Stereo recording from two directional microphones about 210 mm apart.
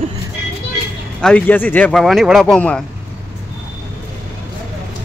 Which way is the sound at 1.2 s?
5° left (ahead or behind).